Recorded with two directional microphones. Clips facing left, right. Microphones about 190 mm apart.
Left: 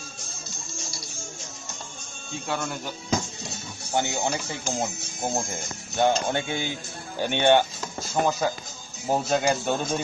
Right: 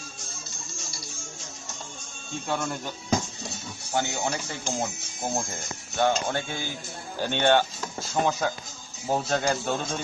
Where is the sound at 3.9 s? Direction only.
20° left (ahead or behind).